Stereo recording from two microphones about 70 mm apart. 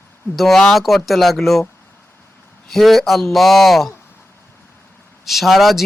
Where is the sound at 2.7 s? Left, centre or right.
Centre.